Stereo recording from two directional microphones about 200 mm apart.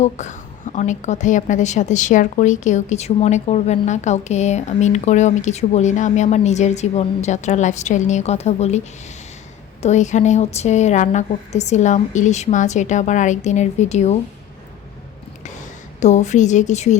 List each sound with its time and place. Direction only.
0.0 s a woman's voice: 35° left (ahead or behind)
16.0 s a woman's voice: 35° left (ahead or behind)